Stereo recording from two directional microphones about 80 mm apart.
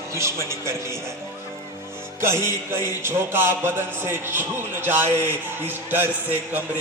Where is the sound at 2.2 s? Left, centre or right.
Right.